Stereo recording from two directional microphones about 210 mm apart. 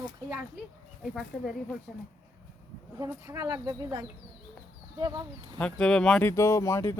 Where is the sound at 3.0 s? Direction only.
15° right (ahead or behind).